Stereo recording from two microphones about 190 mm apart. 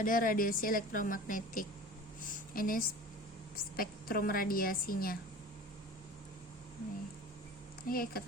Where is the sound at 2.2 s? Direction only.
45° left (ahead or behind).